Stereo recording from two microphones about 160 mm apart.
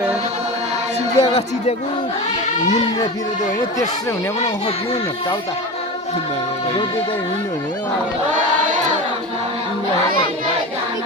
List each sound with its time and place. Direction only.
1.2 s speech: 40° left (ahead or behind)